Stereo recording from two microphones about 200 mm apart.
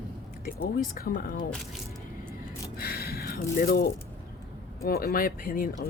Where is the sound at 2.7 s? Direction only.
50° left (ahead or behind).